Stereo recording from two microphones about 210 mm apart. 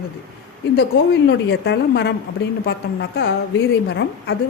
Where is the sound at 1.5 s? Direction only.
55° left (ahead or behind).